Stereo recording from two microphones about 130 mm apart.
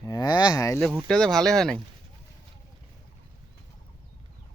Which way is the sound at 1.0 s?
5° left (ahead or behind).